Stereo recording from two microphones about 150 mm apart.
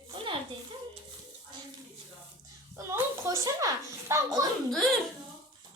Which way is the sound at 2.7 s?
20° right (ahead or behind).